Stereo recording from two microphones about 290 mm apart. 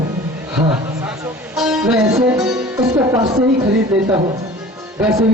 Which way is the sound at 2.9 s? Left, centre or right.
Centre.